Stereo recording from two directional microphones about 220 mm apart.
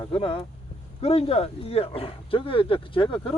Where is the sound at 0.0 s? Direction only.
25° left (ahead or behind).